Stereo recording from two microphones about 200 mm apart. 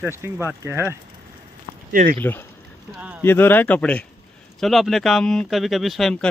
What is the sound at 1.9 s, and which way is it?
Speech, 45° right (ahead or behind).